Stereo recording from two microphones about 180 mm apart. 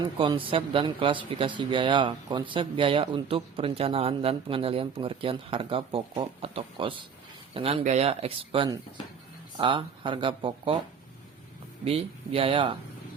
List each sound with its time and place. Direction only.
0.0 s speech: 30° right (ahead or behind)
11.9 s speech: 35° right (ahead or behind)